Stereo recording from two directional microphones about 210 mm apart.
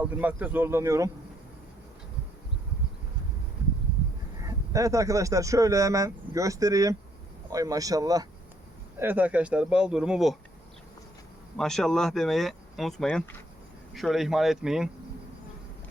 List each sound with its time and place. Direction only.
0.0 s speech: 5° right (ahead or behind)
4.4 s speech: 15° right (ahead or behind)
11.5 s speech: centre (ahead or behind)